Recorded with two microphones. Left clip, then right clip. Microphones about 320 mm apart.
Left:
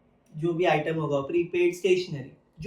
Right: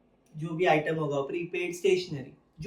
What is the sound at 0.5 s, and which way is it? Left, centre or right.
Speech, centre.